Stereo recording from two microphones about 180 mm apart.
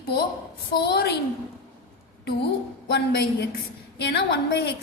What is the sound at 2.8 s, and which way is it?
A woman's voice, 70° left (ahead or behind).